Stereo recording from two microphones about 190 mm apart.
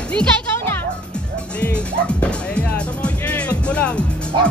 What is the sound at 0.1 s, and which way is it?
Music, 5° left (ahead or behind).